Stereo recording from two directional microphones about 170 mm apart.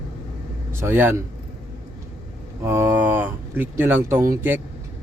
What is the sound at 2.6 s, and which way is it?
Speech, 15° right (ahead or behind).